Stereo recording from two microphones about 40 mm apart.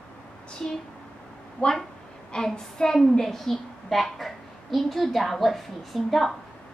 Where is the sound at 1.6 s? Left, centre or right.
Left.